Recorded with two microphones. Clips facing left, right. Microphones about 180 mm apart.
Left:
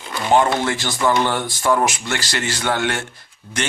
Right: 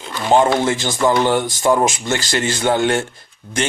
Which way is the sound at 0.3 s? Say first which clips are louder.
Right 3 dB; 25° right (ahead or behind).